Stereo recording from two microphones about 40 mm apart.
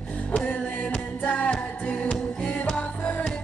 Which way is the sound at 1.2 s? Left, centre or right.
Left.